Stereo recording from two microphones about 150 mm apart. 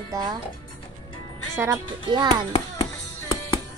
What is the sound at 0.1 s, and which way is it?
Speech, 25° right (ahead or behind).